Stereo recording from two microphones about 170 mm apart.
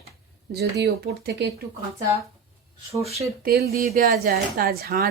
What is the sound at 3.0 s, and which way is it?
Speech, 40° right (ahead or behind).